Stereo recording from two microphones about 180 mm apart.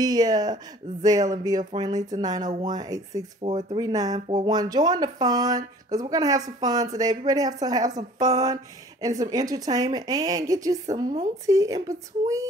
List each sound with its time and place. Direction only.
0.0 s speech: 20° right (ahead or behind)
3.4 s speech: 35° right (ahead or behind)
3.8 s speech: 20° right (ahead or behind)